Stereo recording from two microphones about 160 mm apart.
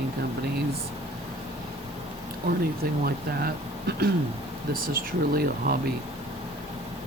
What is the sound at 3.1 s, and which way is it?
Speech, 75° right (ahead or behind).